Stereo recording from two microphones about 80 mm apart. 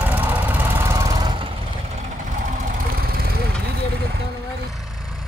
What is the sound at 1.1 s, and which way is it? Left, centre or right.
Vehicle, right.